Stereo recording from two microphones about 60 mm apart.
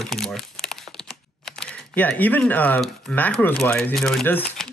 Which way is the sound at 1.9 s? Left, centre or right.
Left.